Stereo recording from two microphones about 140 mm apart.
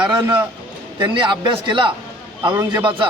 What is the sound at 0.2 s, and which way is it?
Speech, 15° right (ahead or behind).